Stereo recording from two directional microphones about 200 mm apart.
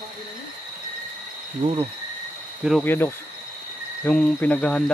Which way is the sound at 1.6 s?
25° right (ahead or behind).